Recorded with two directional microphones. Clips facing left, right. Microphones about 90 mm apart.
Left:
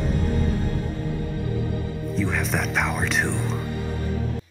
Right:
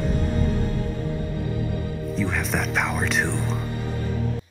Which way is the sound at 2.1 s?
Centre (ahead or behind).